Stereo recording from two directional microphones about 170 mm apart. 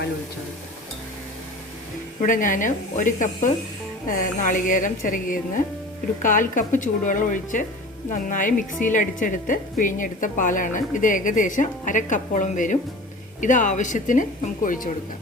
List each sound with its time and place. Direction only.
2.2 s a woman's voice: 50° left (ahead or behind)